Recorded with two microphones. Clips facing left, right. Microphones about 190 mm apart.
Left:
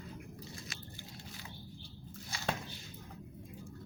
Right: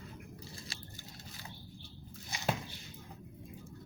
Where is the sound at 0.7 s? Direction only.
30° right (ahead or behind).